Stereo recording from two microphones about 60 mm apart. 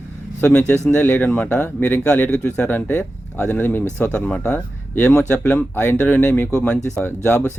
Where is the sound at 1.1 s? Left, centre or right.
Left.